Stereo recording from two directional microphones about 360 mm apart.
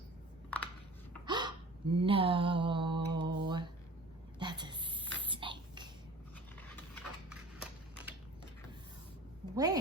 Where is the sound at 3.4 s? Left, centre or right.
Centre.